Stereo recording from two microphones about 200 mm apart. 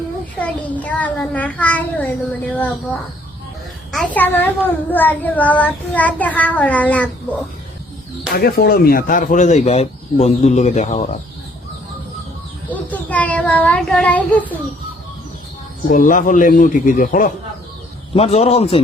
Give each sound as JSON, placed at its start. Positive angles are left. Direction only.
{"t": 0.3, "sound": "child singing", "side_deg": 5}
{"t": 3.9, "sound": "a child's voice", "side_deg": 5}
{"t": 4.9, "sound": "child singing", "side_deg": 10}
{"t": 8.4, "sound": "speech", "side_deg": 50}
{"t": 12.7, "sound": "child singing", "side_deg": 5}
{"t": 15.9, "sound": "speech", "side_deg": 40}
{"t": 18.1, "sound": "speech", "side_deg": 30}